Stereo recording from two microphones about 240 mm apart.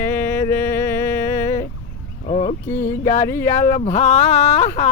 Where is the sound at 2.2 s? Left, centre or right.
Left.